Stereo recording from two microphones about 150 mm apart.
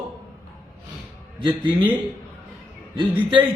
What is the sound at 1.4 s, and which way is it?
Speech, 30° right (ahead or behind).